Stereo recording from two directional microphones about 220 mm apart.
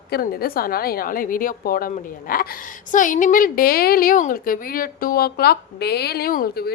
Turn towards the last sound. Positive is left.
turn(degrees=40)  # may be behind; listen again after turning